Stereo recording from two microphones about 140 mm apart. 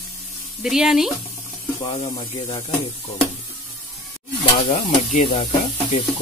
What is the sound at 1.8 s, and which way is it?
Speech, 35° left (ahead or behind).